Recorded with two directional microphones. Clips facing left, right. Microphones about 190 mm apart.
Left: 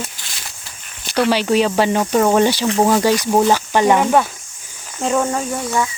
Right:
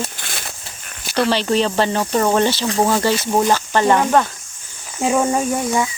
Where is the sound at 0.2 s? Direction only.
55° right (ahead or behind).